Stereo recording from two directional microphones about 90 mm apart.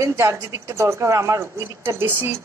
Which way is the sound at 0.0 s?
35° right (ahead or behind).